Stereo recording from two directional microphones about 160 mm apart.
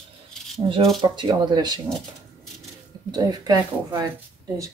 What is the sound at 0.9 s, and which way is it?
Speech, 30° right (ahead or behind).